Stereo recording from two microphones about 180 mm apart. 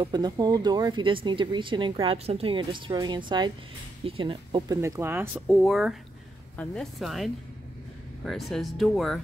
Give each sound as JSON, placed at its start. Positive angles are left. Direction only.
{"t": 0.0, "sound": "speech", "side_deg": -25}
{"t": 4.8, "sound": "speech", "side_deg": -15}
{"t": 5.5, "sound": "speech", "side_deg": 0}
{"t": 8.3, "sound": "speech", "side_deg": 0}